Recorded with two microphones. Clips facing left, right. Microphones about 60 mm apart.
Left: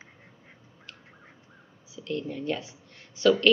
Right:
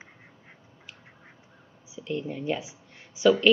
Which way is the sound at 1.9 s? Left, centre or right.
Centre.